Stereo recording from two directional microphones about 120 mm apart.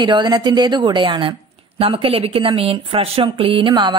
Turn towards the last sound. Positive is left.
turn(degrees=-40)  # may be behind; listen again after turning